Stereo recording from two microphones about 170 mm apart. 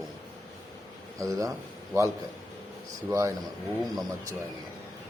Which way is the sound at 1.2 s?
20° right (ahead or behind).